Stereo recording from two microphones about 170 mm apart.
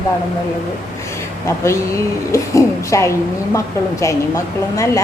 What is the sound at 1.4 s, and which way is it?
A woman's voice, 15° left (ahead or behind).